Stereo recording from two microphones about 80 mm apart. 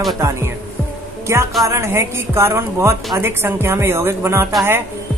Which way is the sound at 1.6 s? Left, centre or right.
Right.